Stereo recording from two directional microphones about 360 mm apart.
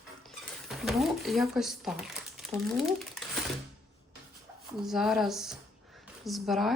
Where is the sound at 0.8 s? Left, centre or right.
Centre.